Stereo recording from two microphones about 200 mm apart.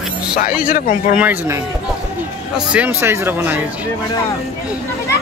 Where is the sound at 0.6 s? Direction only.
45° left (ahead or behind).